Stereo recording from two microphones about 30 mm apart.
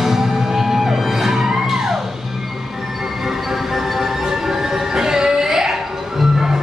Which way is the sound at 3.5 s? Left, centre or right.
Centre.